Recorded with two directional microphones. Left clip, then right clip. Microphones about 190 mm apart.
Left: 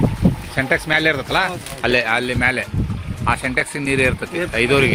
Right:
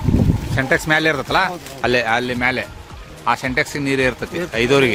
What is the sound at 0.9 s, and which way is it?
Speech, 25° right (ahead or behind).